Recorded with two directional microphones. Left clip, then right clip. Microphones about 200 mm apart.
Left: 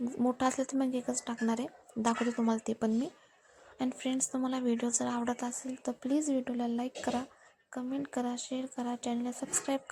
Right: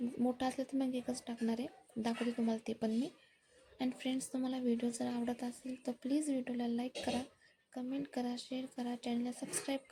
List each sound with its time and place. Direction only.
0.2 s speech: 15° left (ahead or behind)